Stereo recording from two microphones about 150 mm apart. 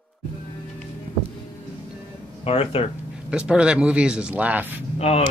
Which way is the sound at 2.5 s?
40° left (ahead or behind).